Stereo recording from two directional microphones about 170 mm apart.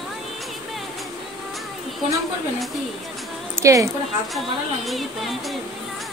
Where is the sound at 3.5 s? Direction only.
15° right (ahead or behind).